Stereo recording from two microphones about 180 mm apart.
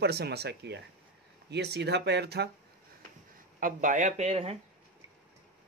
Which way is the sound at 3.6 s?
45° right (ahead or behind).